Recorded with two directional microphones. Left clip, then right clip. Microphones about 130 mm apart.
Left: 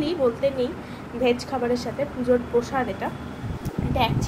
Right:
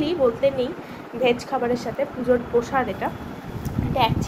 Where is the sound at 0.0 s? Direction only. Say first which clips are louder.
Right 2 dB; 10° right (ahead or behind).